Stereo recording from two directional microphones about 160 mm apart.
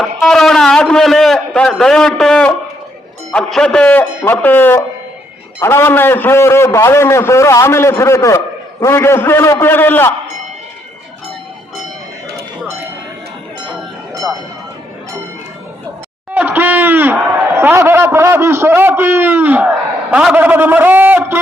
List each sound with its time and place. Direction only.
0.2 s a man's voice: centre (ahead or behind)
16.3 s speech: 10° right (ahead or behind)